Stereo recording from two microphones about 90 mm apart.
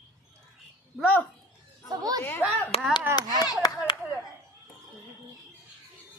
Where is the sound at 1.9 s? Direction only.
45° right (ahead or behind).